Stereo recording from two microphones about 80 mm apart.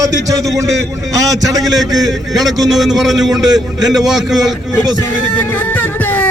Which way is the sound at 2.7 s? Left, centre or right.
Centre.